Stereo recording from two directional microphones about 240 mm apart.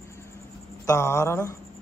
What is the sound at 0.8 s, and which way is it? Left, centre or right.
Speech, centre.